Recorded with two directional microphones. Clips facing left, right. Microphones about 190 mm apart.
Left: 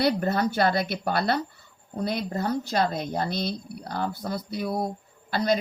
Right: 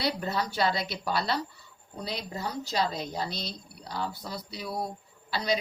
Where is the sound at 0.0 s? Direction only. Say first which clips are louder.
Left 7 dB; 50° left (ahead or behind).